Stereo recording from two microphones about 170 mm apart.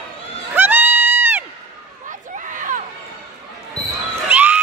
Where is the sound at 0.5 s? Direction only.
10° right (ahead or behind).